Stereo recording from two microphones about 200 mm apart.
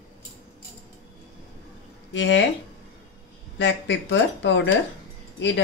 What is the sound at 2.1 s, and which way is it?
Speech, 65° left (ahead or behind).